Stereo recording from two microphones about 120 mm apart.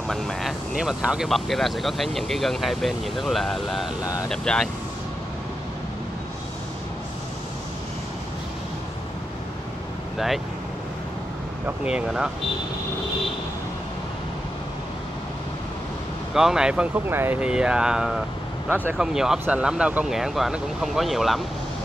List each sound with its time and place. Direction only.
0.1 s speech: centre (ahead or behind)
4.0 s speech: 30° left (ahead or behind)
4.3 s speech: 5° left (ahead or behind)
10.1 s speech: centre (ahead or behind)
11.6 s speech: 10° right (ahead or behind)
16.3 s speech: 5° right (ahead or behind)
17.4 s speech: 5° right (ahead or behind)
19.1 s speech: 5° right (ahead or behind)